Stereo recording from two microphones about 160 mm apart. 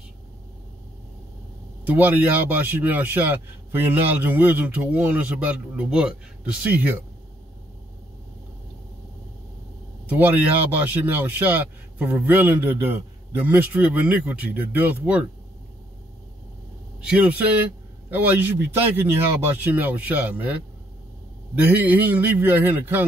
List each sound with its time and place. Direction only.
1.9 s speech: 10° right (ahead or behind)
10.0 s speech: 10° right (ahead or behind)
17.0 s speech: 10° right (ahead or behind)